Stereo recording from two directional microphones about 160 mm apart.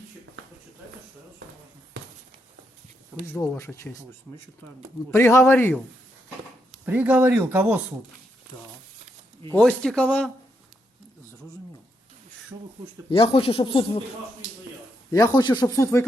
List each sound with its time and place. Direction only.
2.0 s a sound: 90° right
3.3 s speech: 15° left (ahead or behind)
5.1 s speech: 15° left (ahead or behind)
6.8 s speech: 10° right (ahead or behind)
9.5 s speech: 5° left (ahead or behind)
13.1 s speech: 35° left (ahead or behind)
15.1 s speech: 25° left (ahead or behind)